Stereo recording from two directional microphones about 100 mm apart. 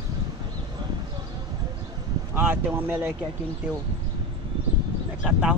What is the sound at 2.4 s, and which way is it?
Speech, 20° right (ahead or behind).